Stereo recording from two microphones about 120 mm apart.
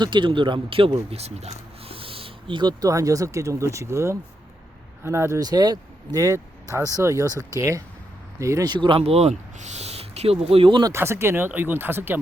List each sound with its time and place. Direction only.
0.0 s speech: 40° right (ahead or behind)
10.9 s speech: 20° right (ahead or behind)